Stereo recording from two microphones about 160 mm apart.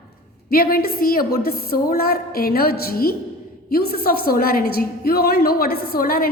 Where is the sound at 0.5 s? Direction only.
70° left (ahead or behind).